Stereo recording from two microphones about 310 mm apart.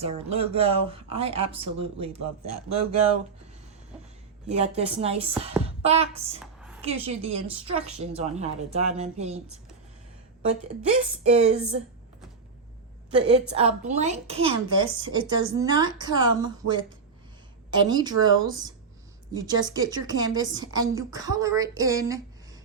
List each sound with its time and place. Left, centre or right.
0.0 s speech: centre
2.1 s a man's voice: right
4.4 s speech: right
5.6 s a sound: centre
6.4 s a sound: centre
6.8 s speech: centre
11.2 s speech: right
13.1 s a woman's voice: centre
17.8 s a woman's voice: centre